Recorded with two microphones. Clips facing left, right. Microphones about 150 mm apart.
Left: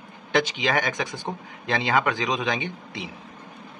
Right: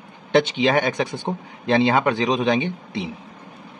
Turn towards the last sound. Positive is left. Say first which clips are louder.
# right 7 dB
turn(degrees=-25)  # may be behind; listen again after turning